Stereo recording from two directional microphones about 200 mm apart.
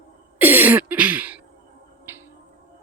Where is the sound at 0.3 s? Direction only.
10° right (ahead or behind).